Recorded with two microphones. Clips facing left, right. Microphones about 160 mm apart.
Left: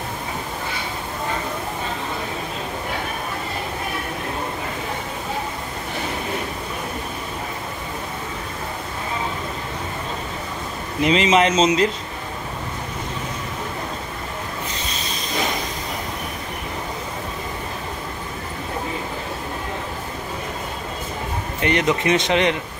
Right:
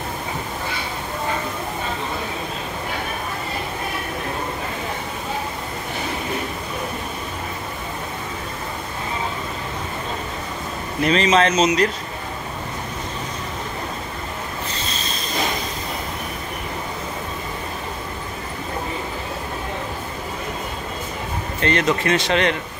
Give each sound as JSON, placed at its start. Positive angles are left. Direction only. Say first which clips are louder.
{"t": 11.0, "sound": "speech", "louder": "even", "side_deg": 20}
{"t": 14.9, "sound": "a sound", "louder": "right 1 dB", "side_deg": 15}
{"t": 21.5, "sound": "speech", "louder": "even", "side_deg": 15}